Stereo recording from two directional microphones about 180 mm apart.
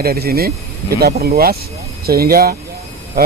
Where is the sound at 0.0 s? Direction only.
60° right (ahead or behind).